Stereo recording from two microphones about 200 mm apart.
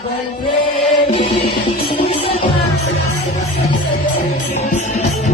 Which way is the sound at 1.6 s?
30° left (ahead or behind).